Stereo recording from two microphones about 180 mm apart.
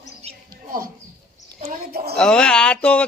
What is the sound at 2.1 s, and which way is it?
Speech, 5° left (ahead or behind).